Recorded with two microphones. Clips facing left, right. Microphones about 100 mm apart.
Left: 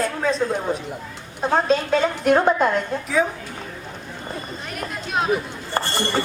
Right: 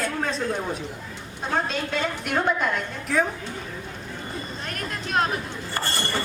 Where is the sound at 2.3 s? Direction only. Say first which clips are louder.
Left 8 dB; 35° left (ahead or behind).